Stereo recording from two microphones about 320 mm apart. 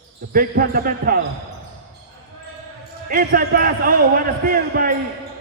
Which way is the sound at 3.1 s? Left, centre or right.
Right.